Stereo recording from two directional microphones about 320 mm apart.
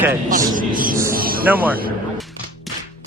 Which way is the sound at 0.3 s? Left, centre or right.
Right.